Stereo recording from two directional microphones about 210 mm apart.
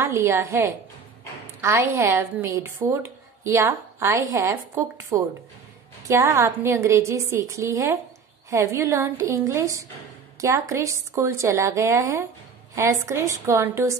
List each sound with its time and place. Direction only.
0.0 s a woman's voice: 10° right (ahead or behind)